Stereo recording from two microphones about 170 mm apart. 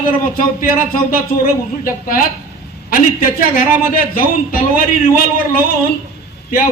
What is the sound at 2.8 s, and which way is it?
A man's voice, 55° left (ahead or behind).